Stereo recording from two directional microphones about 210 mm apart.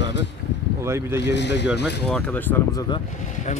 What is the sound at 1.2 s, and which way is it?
Speech, 55° left (ahead or behind).